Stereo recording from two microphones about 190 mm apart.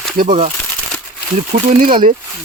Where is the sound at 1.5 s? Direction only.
40° right (ahead or behind).